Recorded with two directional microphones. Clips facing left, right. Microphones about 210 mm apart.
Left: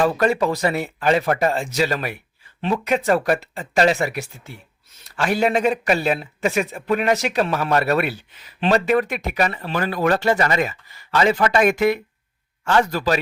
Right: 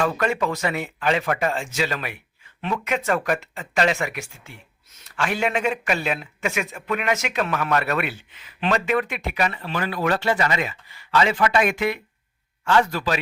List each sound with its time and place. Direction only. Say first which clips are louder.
0.0 s a man's voice: left 4 dB; 35° left (ahead or behind)